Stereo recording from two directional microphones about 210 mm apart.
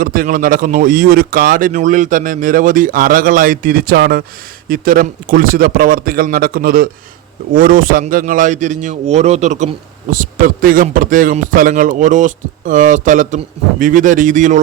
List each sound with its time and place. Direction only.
0.0 s a man's voice: 40° right (ahead or behind)